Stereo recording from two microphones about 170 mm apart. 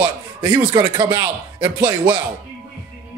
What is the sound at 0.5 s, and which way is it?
Speech, 25° right (ahead or behind).